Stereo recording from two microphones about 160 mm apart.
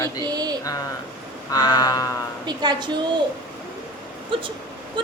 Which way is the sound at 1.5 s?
25° left (ahead or behind).